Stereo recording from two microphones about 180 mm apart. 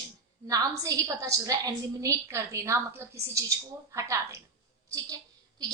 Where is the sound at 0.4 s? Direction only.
20° right (ahead or behind).